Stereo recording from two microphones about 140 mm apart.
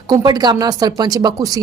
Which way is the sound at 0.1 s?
30° right (ahead or behind).